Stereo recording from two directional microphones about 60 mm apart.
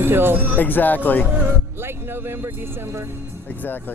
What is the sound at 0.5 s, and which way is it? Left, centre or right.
Speech, left.